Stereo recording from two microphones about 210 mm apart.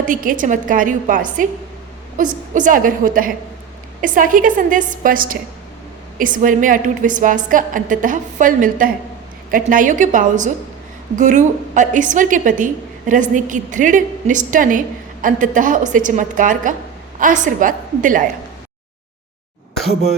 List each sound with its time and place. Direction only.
0.1 s a woman's voice: 40° right (ahead or behind)